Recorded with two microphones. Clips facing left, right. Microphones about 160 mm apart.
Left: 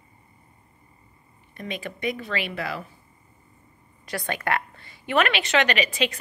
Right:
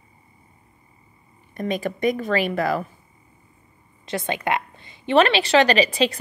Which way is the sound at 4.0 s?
25° right (ahead or behind).